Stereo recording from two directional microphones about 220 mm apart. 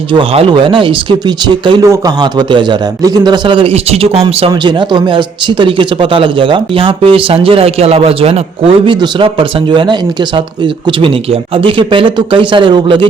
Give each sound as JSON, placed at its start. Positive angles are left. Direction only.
{"t": 0.1, "sound": "a man's voice", "side_deg": -25}